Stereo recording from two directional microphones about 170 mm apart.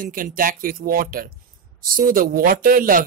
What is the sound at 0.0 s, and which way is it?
Speech, 55° right (ahead or behind).